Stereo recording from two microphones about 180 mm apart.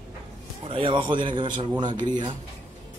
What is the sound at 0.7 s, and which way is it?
A man's voice, 30° right (ahead or behind).